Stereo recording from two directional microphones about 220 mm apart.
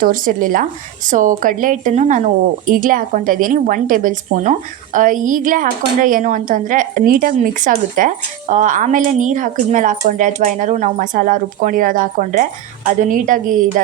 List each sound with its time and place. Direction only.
0.0 s a woman's voice: 40° right (ahead or behind)